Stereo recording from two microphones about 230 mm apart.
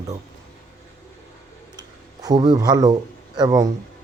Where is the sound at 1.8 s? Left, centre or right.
Centre.